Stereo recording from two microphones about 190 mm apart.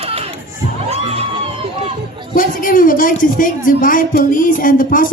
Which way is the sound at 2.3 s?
45° left (ahead or behind).